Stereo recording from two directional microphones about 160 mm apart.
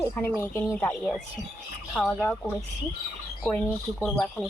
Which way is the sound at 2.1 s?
15° left (ahead or behind).